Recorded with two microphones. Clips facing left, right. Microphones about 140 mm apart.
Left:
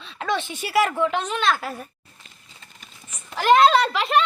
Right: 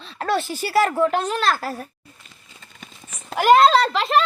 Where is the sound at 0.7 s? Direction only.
30° right (ahead or behind).